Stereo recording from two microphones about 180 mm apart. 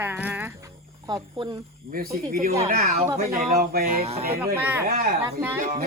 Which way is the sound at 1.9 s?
55° right (ahead or behind).